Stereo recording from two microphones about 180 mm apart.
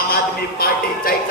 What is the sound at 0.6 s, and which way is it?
Music, 55° left (ahead or behind).